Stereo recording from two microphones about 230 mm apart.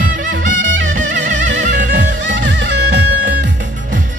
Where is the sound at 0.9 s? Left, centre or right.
Right.